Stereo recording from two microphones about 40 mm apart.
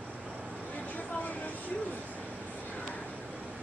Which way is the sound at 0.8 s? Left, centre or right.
Left.